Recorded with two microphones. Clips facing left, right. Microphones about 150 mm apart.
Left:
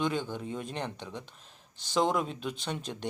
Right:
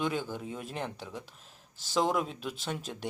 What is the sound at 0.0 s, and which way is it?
Speech, 5° right (ahead or behind).